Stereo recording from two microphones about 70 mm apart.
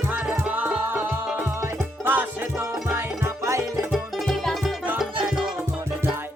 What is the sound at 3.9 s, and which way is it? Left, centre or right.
Music, centre.